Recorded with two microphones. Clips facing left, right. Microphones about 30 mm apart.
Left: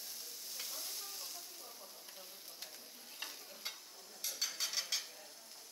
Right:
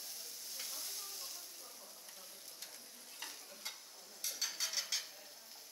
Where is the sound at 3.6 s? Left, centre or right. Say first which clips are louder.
Left 2 dB; left.